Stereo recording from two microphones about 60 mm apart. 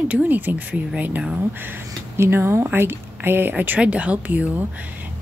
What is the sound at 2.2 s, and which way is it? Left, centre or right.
Speech, right.